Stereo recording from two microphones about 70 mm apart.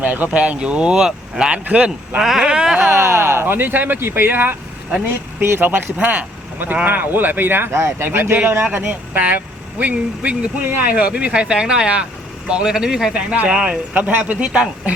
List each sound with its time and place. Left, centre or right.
0.0 s speech: right
2.9 s speech: right; by 14.0 s centre
14.0 s speech: right